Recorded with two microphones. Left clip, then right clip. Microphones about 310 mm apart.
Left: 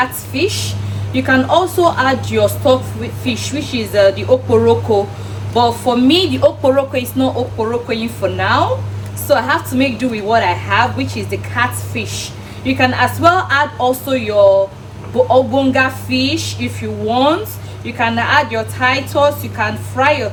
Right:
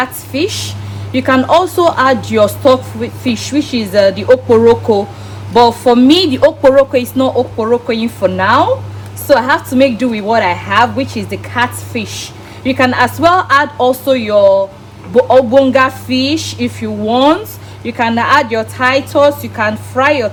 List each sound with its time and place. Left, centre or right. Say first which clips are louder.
0.0 s speech: right 1 dB; right
5.5 s a woman's voice: right 6 dB; right